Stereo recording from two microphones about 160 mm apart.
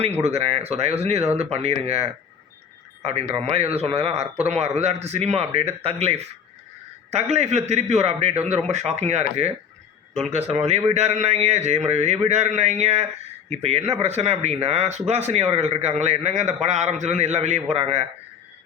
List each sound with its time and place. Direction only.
0.2 s speech: 40° right (ahead or behind)